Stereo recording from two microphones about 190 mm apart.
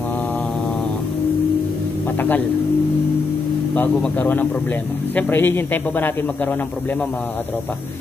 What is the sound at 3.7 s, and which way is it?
Speech, 10° left (ahead or behind).